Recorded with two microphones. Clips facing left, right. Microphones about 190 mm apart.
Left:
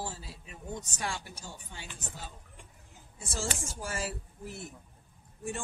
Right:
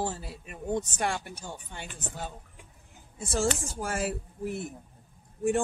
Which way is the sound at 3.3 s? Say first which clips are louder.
Right 8 dB; 60° right (ahead or behind).